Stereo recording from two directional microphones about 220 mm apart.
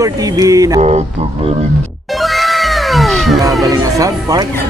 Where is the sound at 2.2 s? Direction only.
Centre (ahead or behind).